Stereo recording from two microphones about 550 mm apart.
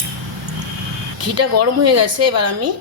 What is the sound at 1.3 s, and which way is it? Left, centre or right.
Speech, right.